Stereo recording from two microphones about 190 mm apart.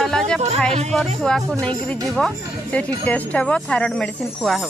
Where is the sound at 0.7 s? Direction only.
35° right (ahead or behind).